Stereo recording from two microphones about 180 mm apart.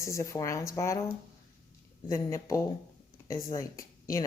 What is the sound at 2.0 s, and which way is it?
Speech, 20° left (ahead or behind).